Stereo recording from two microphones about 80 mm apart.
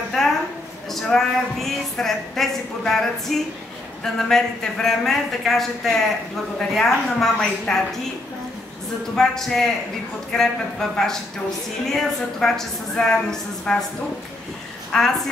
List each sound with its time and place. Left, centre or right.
0.2 s a sound: centre
0.8 s speech: centre
9.1 s a woman's voice: centre
14.9 s a woman's voice: centre